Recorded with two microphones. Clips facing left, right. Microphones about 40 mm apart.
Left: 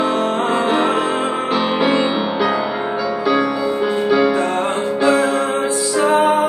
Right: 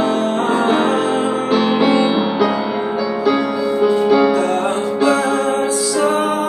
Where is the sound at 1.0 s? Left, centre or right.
Left.